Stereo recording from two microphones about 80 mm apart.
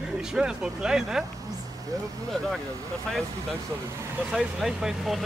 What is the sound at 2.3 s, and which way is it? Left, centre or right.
Speech, centre.